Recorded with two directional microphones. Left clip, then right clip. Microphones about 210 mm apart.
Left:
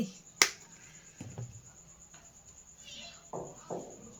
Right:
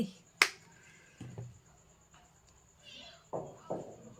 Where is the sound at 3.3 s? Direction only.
45° right (ahead or behind).